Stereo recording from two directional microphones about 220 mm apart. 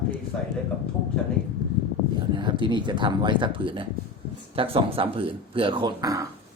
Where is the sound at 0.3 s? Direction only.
5° left (ahead or behind).